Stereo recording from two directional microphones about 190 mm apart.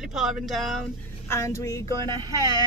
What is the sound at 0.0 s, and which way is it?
Speech, centre (ahead or behind).